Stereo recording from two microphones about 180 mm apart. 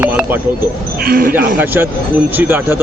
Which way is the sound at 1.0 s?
55° right (ahead or behind).